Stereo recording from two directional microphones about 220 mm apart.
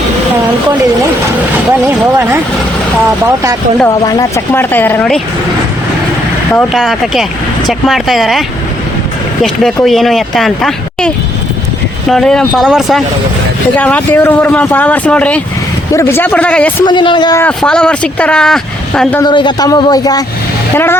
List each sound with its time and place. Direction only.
1.8 s speech: 10° right (ahead or behind)
3.8 s speech: 15° left (ahead or behind)
6.5 s speech: 5° left (ahead or behind)
9.8 s speech: centre (ahead or behind)
12.1 s speech: 5° left (ahead or behind)
16.8 s a man's voice: 20° left (ahead or behind)
17.4 s speech: 5° left (ahead or behind)
19.2 s a man's voice: 20° left (ahead or behind)